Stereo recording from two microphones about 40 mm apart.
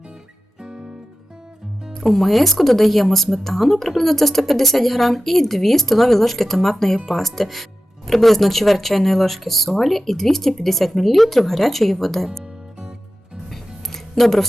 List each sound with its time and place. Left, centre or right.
0.6 s music: right
1.9 s speech: centre
13.5 s music: centre